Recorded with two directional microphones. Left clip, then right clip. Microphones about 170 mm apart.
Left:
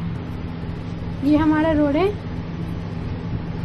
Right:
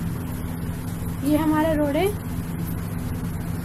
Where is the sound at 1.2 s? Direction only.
25° left (ahead or behind).